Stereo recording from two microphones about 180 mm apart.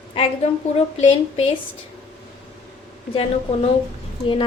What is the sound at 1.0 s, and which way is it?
Speech, 35° left (ahead or behind).